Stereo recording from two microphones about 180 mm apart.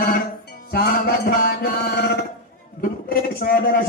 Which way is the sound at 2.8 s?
55° left (ahead or behind).